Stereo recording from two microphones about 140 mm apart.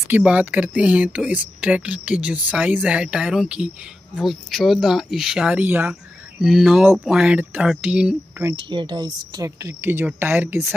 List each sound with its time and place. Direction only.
0.1 s speech: 10° right (ahead or behind)
8.5 s speech: 35° right (ahead or behind); by 10.7 s 15° right (ahead or behind)